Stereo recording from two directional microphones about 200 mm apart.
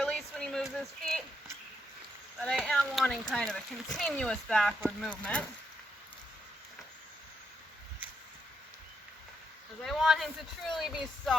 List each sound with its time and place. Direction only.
0.0 s a sound: 5° left (ahead or behind)
2.4 s speech: centre (ahead or behind)
9.8 s speech: centre (ahead or behind)